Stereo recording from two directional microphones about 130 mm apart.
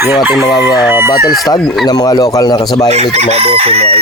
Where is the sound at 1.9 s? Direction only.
30° left (ahead or behind).